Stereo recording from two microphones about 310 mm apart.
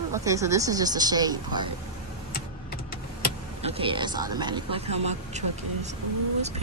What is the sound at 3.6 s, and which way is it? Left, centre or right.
Speech, centre.